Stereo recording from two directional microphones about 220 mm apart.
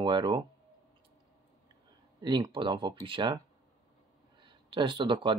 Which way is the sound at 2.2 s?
20° right (ahead or behind).